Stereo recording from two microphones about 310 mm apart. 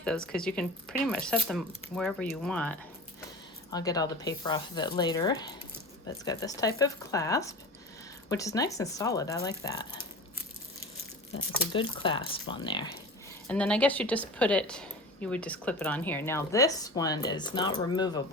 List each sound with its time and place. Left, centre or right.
0.0 s a woman's voice: centre
11.7 s speech: centre
13.5 s a woman's voice: centre